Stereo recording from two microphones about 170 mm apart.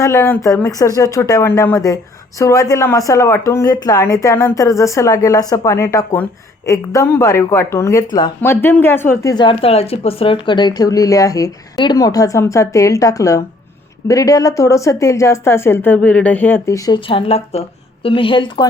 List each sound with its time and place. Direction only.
0.0 s a woman's voice: 15° left (ahead or behind)
9.3 s a woman's voice: 30° left (ahead or behind)
17.1 s a woman's voice: 35° left (ahead or behind)